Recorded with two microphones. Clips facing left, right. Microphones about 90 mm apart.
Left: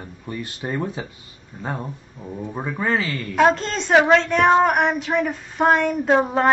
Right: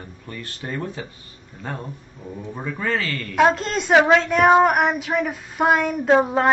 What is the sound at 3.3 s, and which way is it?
A woman's voice, centre (ahead or behind).